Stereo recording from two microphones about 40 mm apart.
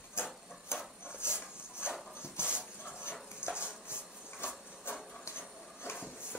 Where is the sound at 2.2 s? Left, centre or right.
Left.